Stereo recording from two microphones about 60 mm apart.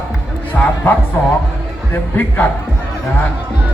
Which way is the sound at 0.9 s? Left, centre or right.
Left.